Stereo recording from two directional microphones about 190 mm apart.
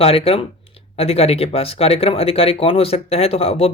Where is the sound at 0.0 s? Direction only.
30° left (ahead or behind).